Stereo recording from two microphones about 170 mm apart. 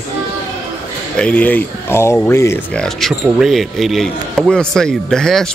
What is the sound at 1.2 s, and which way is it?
Speech, 10° left (ahead or behind).